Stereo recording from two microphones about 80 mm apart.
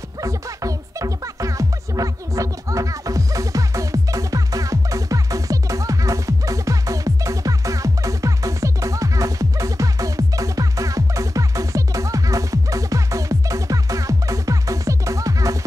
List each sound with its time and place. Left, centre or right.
0.2 s music: right